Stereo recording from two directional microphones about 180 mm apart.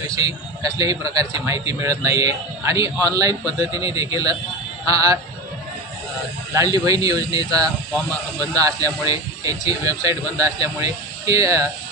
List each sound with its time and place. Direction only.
0.0 s a man's voice: 20° right (ahead or behind)
6.5 s a man's voice: 20° right (ahead or behind)